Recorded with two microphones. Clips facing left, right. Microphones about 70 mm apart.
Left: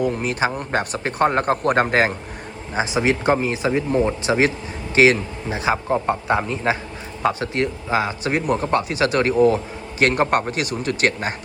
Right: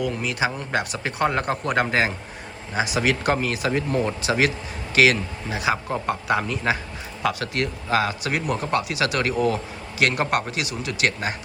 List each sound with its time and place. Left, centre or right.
0.0 s speech: left
2.7 s a man's voice: left